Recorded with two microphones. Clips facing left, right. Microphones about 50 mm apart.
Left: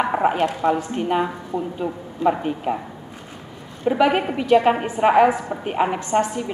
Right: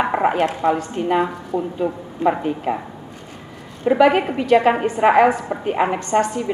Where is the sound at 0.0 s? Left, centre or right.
Centre.